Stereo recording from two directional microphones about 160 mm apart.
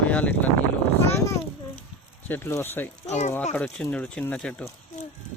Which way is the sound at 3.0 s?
45° left (ahead or behind).